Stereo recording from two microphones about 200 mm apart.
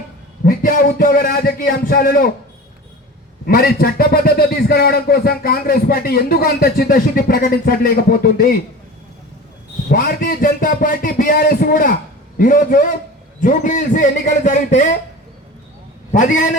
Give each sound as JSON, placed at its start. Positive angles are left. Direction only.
{"t": 0.4, "sound": "a man's voice", "side_deg": 45}
{"t": 3.4, "sound": "a man's voice", "side_deg": 50}
{"t": 9.9, "sound": "a man's voice", "side_deg": 45}
{"t": 16.1, "sound": "a man's voice", "side_deg": 40}